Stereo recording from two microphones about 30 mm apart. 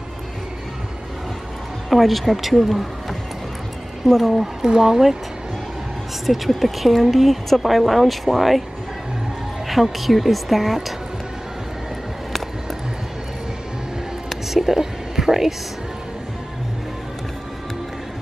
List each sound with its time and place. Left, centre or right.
1.9 s a woman's voice: centre
4.6 s speech: centre
6.2 s a woman's voice: centre
9.7 s a woman's voice: centre
14.3 s whispering: centre